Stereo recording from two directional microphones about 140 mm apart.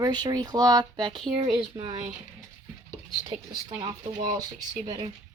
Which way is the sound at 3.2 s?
35° right (ahead or behind).